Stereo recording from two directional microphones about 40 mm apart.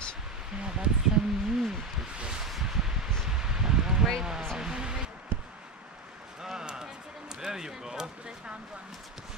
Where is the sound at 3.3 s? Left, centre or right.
Centre.